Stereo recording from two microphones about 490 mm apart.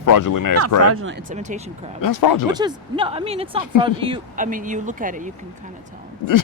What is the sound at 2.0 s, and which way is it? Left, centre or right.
Speech, left.